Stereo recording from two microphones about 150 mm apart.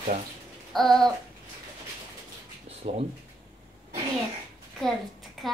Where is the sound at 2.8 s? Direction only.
45° right (ahead or behind).